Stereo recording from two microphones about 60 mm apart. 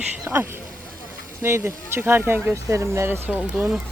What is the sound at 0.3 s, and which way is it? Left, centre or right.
Speech, right.